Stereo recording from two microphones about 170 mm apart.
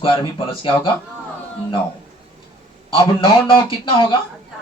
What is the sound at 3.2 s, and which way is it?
Speech, 30° left (ahead or behind).